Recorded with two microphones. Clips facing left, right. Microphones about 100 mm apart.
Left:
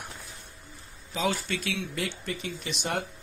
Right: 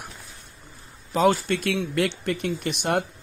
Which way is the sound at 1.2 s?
55° right (ahead or behind).